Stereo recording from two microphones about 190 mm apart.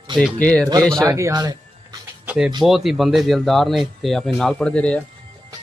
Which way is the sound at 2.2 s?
5° right (ahead or behind).